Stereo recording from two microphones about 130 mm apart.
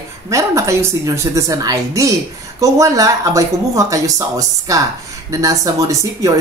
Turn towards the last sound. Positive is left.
turn(degrees=-25)  # may be behind; listen again after turning